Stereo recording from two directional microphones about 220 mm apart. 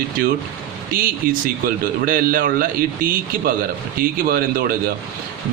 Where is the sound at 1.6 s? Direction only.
40° right (ahead or behind).